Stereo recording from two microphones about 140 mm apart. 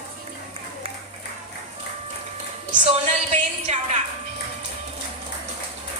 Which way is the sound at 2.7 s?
55° right (ahead or behind).